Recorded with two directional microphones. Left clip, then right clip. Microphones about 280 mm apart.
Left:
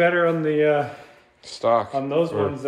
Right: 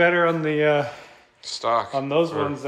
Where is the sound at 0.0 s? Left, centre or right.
Right.